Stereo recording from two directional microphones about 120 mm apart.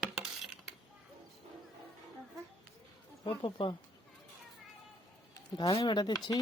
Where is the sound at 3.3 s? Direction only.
45° left (ahead or behind).